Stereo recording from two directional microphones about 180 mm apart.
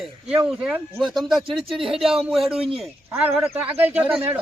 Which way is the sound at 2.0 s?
Centre (ahead or behind).